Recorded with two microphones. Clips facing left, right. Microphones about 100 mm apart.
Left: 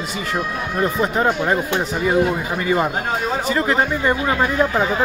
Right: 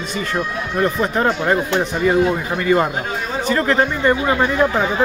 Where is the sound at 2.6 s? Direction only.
15° left (ahead or behind).